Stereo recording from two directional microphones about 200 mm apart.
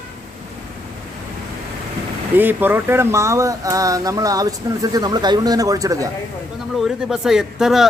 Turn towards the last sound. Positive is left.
turn(degrees=0)  # may be behind; listen again after turning